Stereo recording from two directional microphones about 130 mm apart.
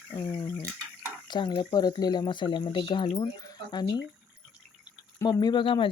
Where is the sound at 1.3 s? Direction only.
35° left (ahead or behind).